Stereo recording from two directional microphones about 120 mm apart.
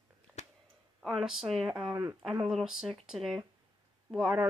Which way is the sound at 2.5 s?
Centre (ahead or behind).